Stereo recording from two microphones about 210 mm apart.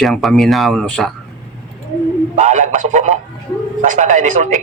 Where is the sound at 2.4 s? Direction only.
35° right (ahead or behind).